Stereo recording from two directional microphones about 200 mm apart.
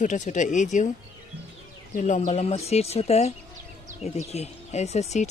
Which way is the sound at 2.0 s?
40° left (ahead or behind).